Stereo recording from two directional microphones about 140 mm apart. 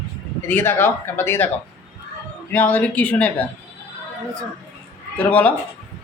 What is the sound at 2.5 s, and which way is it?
Speech, 15° left (ahead or behind).